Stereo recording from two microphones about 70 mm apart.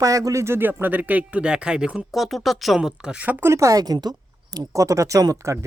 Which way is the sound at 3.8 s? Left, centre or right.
Right.